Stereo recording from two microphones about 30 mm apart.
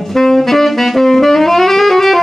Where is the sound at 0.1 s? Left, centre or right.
Centre.